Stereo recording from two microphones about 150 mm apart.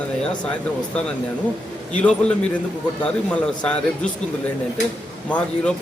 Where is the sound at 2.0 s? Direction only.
5° left (ahead or behind).